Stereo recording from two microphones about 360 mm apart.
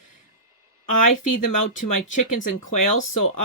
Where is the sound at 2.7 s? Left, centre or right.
Left.